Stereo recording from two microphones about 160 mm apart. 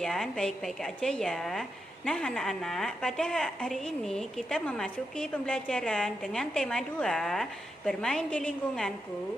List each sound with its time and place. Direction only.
0.0 s a woman's voice: centre (ahead or behind)